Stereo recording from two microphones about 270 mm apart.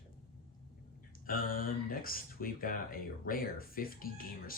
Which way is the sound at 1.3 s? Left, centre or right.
Left.